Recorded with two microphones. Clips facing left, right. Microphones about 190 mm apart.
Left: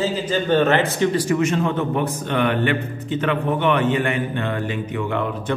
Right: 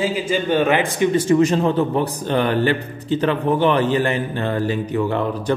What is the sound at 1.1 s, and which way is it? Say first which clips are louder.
A man's voice: right 4 dB; 30° right (ahead or behind).